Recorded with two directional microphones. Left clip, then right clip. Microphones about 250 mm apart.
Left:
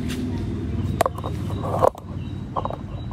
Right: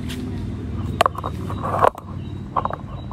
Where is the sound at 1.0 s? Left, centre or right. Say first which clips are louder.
Right 4 dB; left.